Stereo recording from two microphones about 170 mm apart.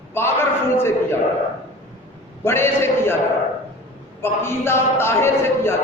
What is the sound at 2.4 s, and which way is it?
Speech, 15° left (ahead or behind).